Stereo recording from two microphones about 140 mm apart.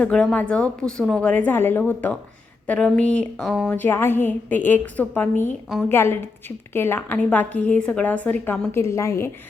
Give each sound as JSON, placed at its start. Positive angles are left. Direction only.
{"t": 0.0, "sound": "a woman's voice", "side_deg": 5}
{"t": 8.7, "sound": "a woman's voice", "side_deg": 20}